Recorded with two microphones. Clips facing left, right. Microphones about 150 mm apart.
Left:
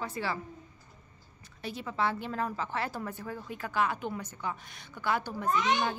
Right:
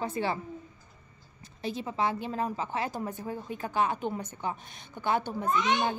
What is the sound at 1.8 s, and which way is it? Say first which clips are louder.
A woman's voice: right 1 dB; 20° right (ahead or behind).